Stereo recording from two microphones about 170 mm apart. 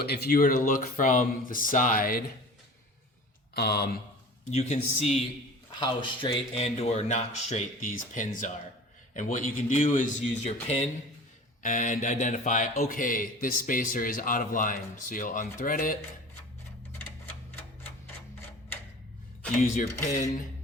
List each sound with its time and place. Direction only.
0.0 s speech: 65° left (ahead or behind)
3.5 s speech: 70° left (ahead or behind)
4.5 s speech: 40° left (ahead or behind)
5.8 s speech: 30° left (ahead or behind); by 16.0 s 55° left (ahead or behind)
19.7 s speech: 40° left (ahead or behind)